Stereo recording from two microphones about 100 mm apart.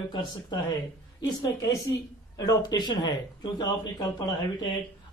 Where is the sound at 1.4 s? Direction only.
35° left (ahead or behind).